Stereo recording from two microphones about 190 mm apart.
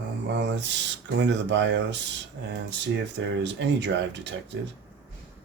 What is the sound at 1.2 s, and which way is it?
Speech, 70° right (ahead or behind).